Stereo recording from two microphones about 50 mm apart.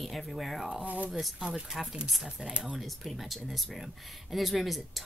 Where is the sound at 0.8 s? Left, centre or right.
Right.